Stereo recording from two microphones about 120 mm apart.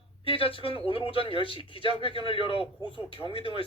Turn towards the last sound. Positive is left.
turn(degrees=50)  # may be behind; listen again after turning